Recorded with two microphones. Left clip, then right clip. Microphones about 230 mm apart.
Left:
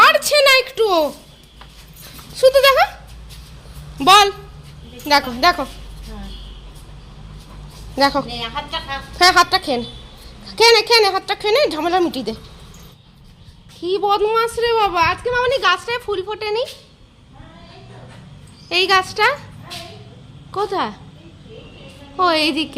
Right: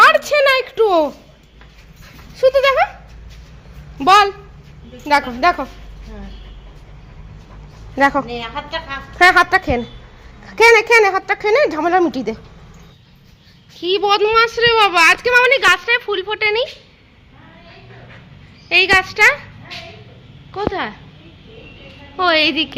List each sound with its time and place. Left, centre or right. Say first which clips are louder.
0.0 s a sound: right 1 dB; centre
2.3 s a sound: left 1 dB; centre
3.9 s a woman's voice: even; centre
7.9 s speech: right 2 dB; centre
8.3 s speech: even; right
9.1 s a woman's voice: right 2 dB; centre
13.8 s speech: right 2 dB; centre
18.7 s a woman's voice: right 3 dB; centre
22.1 s a woman's voice: right 2 dB; centre